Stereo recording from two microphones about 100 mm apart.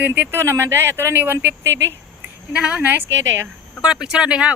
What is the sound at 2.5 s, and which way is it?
Speech, 10° right (ahead or behind).